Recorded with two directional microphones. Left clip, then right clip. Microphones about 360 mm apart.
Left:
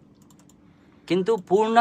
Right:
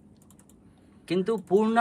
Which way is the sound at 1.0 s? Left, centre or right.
Left.